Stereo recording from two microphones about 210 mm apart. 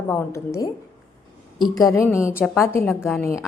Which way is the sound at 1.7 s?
15° left (ahead or behind).